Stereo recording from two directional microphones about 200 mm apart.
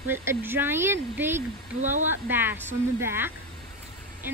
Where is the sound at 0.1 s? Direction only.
10° right (ahead or behind).